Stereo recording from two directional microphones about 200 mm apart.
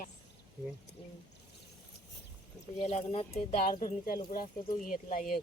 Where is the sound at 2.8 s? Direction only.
35° left (ahead or behind).